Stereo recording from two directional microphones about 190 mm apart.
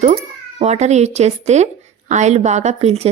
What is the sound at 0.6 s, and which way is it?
A woman's voice, 35° right (ahead or behind).